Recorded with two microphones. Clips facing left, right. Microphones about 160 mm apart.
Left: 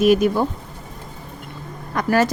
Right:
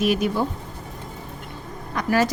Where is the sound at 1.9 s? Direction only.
50° left (ahead or behind).